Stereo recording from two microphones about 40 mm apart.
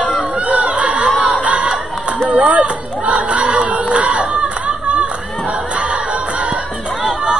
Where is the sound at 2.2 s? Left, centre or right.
Right.